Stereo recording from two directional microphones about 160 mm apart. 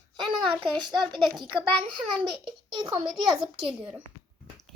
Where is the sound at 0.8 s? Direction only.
25° right (ahead or behind).